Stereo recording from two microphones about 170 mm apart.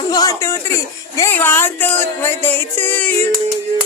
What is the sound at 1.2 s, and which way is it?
Music, 10° left (ahead or behind).